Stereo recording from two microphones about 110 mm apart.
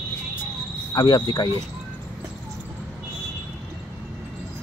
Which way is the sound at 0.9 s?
40° left (ahead or behind).